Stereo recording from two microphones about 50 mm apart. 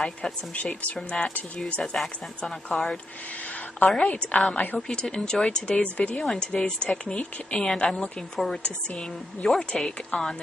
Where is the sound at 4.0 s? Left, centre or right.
Left.